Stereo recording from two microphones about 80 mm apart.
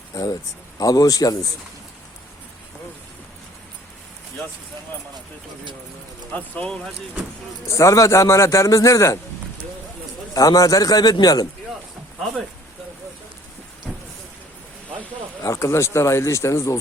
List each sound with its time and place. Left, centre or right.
0.1 s a man's voice: left
6.3 s speech: centre
7.7 s a man's voice: left
10.3 s a man's voice: left
13.9 s a sound: centre
15.4 s a man's voice: left